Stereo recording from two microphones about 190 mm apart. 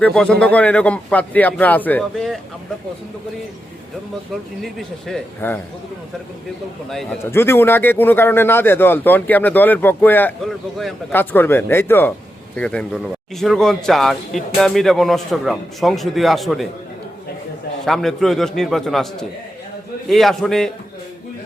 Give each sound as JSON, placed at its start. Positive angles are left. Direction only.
{"t": 0.0, "sound": "speech", "side_deg": 5}
{"t": 4.6, "sound": "speech", "side_deg": 0}
{"t": 6.9, "sound": "speech", "side_deg": 0}
{"t": 7.3, "sound": "speech", "side_deg": 10}
{"t": 17.8, "sound": "speech", "side_deg": 0}